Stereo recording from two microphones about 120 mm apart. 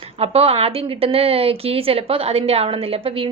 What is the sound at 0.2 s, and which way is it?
A woman's voice, 55° right (ahead or behind).